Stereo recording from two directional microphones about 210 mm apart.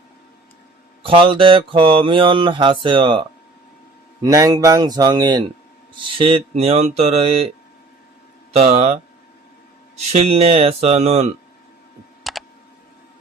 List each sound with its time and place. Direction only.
1.0 s mantra: 25° right (ahead or behind)
4.2 s speech: 15° right (ahead or behind)
6.1 s mantra: 25° right (ahead or behind)
8.5 s speech: 30° right (ahead or behind)
10.1 s mantra: 30° right (ahead or behind)
12.3 s computer keyboard: centre (ahead or behind)